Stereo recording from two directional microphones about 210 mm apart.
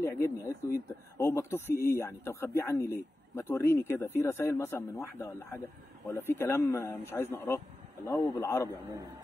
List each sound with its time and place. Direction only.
0.0 s speech: 15° left (ahead or behind)